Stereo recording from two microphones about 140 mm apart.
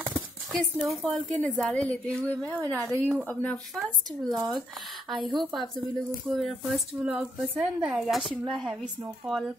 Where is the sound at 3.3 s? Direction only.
10° left (ahead or behind).